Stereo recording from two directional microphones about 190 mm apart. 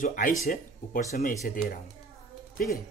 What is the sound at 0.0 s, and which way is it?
Speech, 45° left (ahead or behind).